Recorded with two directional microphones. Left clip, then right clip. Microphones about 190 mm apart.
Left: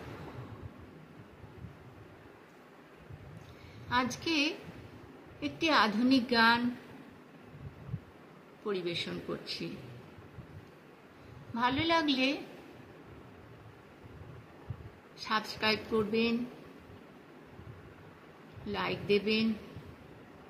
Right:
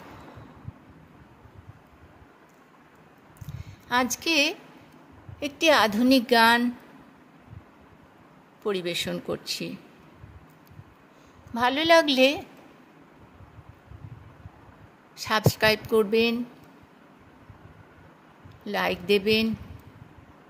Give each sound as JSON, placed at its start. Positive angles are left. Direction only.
{"t": 3.9, "sound": "a woman's voice", "side_deg": -65}
{"t": 8.6, "sound": "speech", "side_deg": -65}
{"t": 11.5, "sound": "a woman's voice", "side_deg": -60}
{"t": 15.1, "sound": "a woman's voice", "side_deg": -65}
{"t": 18.7, "sound": "a woman's voice", "side_deg": -65}